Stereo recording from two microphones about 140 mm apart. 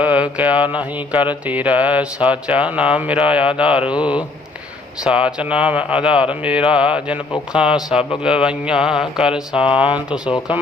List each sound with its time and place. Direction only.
0.0 s mantra: 10° right (ahead or behind)
8.2 s speech: 5° right (ahead or behind)
9.7 s mantra: 10° right (ahead or behind)
10.2 s speech: 35° left (ahead or behind)